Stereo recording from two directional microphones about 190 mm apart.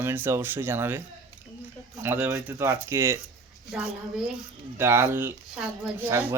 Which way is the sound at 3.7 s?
5° right (ahead or behind).